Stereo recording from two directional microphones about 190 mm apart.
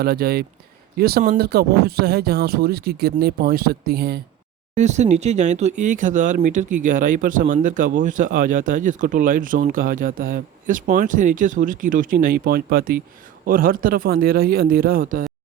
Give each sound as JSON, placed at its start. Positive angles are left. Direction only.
{"t": 0.0, "sound": "speech", "side_deg": -55}
{"t": 4.7, "sound": "speech", "side_deg": -40}